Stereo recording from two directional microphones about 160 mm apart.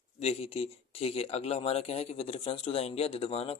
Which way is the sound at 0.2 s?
40° left (ahead or behind).